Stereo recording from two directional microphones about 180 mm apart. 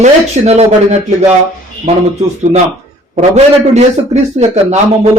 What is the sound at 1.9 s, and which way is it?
Speech, 35° right (ahead or behind).